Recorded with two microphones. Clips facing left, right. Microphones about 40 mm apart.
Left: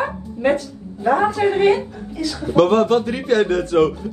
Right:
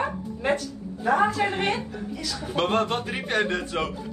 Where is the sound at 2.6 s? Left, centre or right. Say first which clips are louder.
Left 10 dB; right.